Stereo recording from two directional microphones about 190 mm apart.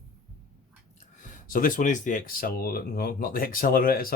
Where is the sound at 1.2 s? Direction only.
45° left (ahead or behind).